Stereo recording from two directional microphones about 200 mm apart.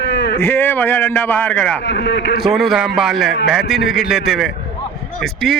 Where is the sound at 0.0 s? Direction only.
60° left (ahead or behind).